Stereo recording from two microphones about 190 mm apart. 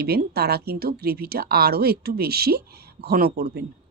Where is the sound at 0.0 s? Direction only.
55° right (ahead or behind).